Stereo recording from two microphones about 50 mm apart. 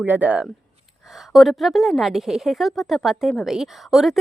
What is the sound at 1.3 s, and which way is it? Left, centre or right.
A woman's voice, centre.